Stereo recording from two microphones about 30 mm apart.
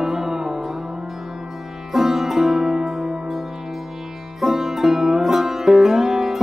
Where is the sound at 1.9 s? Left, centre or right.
Centre.